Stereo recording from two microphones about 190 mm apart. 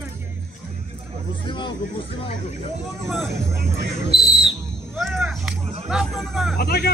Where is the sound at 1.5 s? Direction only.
25° left (ahead or behind).